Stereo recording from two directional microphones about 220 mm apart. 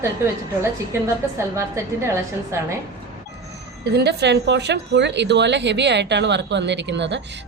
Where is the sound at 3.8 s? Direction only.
50° right (ahead or behind).